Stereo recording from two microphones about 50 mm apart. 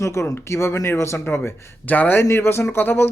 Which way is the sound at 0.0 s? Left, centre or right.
Left.